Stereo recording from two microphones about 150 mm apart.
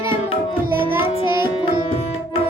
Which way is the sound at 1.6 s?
35° left (ahead or behind).